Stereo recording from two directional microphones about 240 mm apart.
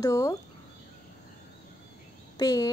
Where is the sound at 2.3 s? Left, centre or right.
Centre.